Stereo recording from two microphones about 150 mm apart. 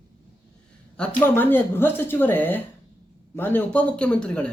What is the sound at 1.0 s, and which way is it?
Speech, 10° left (ahead or behind).